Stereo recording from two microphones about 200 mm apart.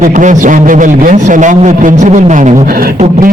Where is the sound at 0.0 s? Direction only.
40° right (ahead or behind).